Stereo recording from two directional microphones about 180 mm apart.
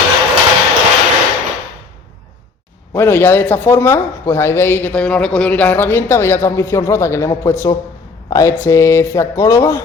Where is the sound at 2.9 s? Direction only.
10° left (ahead or behind).